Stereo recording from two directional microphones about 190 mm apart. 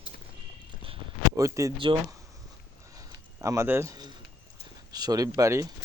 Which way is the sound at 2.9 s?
15° right (ahead or behind).